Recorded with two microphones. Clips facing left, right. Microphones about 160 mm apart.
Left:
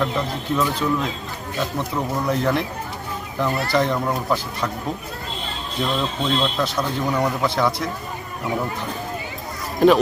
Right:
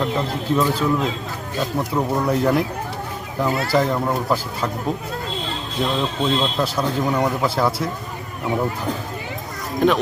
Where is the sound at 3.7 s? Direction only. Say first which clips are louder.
Right 1 dB; 5° right (ahead or behind).